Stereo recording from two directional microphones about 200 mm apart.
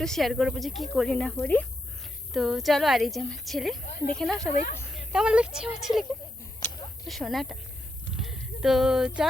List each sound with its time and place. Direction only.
0.0 s speech: centre (ahead or behind)
3.9 s speech: 45° left (ahead or behind)
4.2 s a woman's voice: centre (ahead or behind)
7.1 s speech: centre (ahead or behind)
8.1 s a sound: centre (ahead or behind)